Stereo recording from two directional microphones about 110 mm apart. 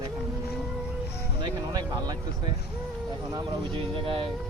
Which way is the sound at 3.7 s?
55° right (ahead or behind).